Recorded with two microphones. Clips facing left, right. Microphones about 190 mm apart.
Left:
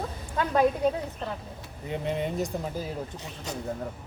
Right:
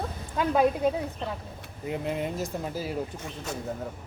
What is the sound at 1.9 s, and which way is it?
Speech, centre (ahead or behind).